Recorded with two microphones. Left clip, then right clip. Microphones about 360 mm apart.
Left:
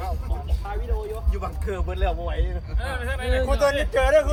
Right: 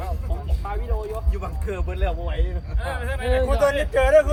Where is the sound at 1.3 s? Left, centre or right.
Centre.